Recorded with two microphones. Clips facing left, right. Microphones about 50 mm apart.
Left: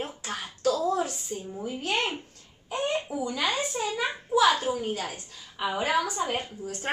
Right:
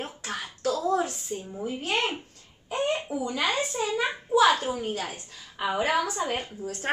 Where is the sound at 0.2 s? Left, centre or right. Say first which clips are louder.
Left 2 dB; right.